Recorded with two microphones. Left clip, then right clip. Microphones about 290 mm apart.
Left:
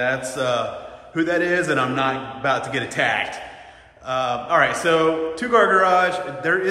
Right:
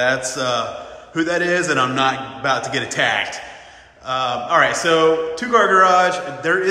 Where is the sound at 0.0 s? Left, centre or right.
Centre.